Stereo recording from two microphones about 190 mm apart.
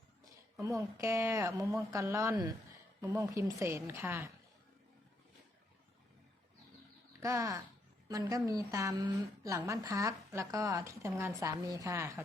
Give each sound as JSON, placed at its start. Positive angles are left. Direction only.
{"t": 0.6, "sound": "a woman's voice", "side_deg": -15}
{"t": 7.2, "sound": "a woman's voice", "side_deg": -15}